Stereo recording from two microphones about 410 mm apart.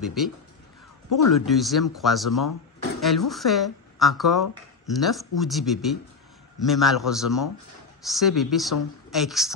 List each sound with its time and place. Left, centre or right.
0.0 s speech: centre
1.3 s speech: centre